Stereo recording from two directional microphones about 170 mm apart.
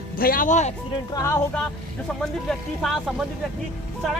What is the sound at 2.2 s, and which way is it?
Speech, centre (ahead or behind).